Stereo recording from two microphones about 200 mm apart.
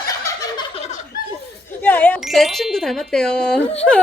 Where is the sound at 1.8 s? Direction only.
10° left (ahead or behind).